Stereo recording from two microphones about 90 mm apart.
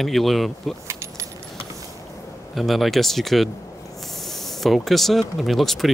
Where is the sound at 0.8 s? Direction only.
35° right (ahead or behind).